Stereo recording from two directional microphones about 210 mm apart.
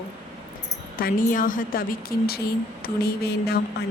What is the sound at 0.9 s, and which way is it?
A woman's voice, 40° left (ahead or behind).